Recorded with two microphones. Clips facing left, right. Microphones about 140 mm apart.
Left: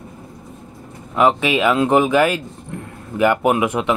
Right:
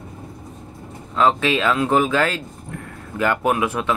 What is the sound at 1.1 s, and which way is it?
Speech, 15° left (ahead or behind).